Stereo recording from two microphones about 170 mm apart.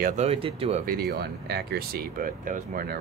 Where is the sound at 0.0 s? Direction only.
45° right (ahead or behind).